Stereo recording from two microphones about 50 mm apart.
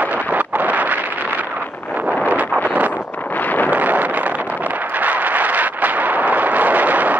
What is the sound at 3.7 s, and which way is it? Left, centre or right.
Wind noise, right.